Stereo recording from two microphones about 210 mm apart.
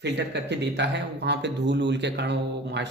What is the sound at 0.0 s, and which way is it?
A man's voice, 55° right (ahead or behind).